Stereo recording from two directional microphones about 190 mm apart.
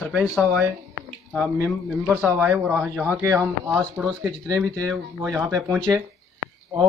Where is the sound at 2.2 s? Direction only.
10° right (ahead or behind).